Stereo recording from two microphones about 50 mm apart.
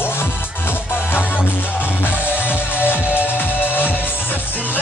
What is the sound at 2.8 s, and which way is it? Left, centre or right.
Music, left.